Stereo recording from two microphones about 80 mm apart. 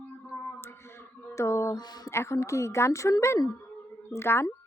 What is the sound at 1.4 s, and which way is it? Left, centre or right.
Speech, left.